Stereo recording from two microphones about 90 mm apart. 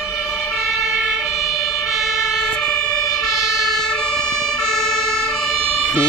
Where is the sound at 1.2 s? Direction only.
Centre (ahead or behind).